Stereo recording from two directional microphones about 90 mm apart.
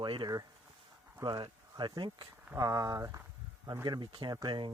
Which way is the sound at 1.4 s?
65° right (ahead or behind).